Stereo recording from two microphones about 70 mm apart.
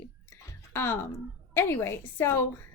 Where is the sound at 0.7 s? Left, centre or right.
Left.